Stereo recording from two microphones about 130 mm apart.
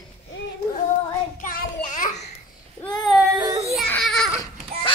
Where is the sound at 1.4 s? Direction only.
90° left.